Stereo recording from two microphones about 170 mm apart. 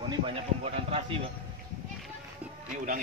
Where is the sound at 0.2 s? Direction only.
35° right (ahead or behind).